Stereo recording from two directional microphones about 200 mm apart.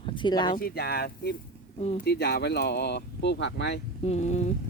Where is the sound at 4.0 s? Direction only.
35° left (ahead or behind).